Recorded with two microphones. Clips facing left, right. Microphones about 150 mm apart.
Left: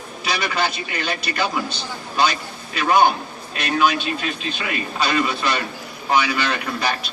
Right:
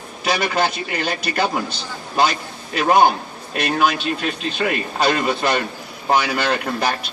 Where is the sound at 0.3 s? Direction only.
50° right (ahead or behind).